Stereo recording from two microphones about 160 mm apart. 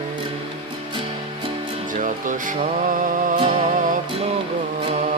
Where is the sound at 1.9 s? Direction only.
55° right (ahead or behind).